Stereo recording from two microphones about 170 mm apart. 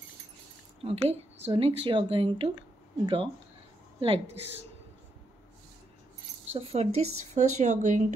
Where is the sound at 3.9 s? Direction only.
35° right (ahead or behind).